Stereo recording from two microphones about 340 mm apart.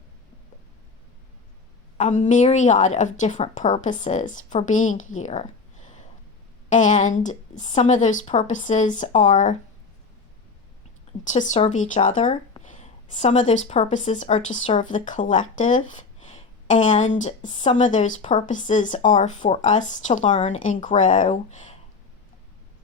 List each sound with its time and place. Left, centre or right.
2.0 s speech: left
11.2 s speech: left